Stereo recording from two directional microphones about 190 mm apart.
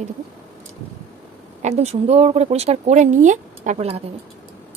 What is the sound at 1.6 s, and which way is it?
Speech, 35° right (ahead or behind).